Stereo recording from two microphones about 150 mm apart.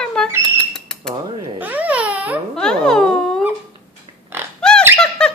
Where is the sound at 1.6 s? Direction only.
10° right (ahead or behind).